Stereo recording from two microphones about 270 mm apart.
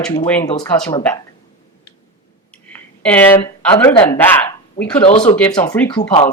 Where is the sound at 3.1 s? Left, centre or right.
Centre.